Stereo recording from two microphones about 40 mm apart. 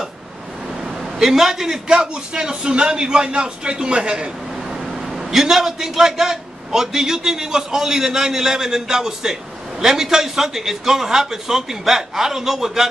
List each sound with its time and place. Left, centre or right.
1.2 s a man's voice: centre; by 4.3 s right
5.1 s a man's voice: centre